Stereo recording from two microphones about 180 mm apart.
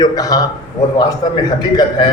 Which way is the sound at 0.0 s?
20° left (ahead or behind).